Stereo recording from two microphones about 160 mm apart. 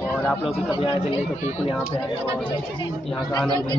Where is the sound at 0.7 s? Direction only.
30° left (ahead or behind).